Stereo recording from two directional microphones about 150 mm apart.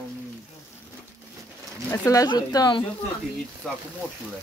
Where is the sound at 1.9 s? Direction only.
20° left (ahead or behind).